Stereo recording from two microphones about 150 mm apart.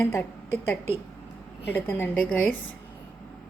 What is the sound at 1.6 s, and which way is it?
Speech, 15° left (ahead or behind).